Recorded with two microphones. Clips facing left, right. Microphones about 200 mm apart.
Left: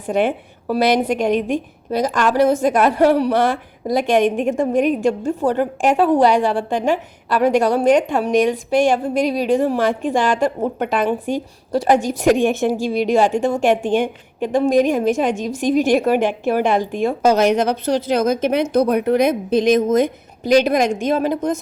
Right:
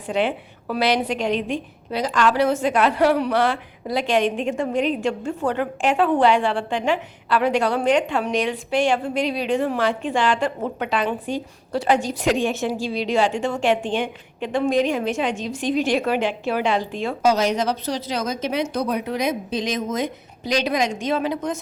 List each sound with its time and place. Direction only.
0.1 s a woman's voice: 45° left (ahead or behind)